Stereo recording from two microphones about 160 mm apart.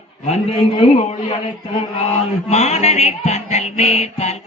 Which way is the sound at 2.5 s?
45° left (ahead or behind).